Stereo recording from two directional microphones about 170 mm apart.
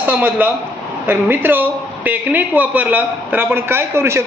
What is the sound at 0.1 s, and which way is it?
A man's voice, 10° right (ahead or behind).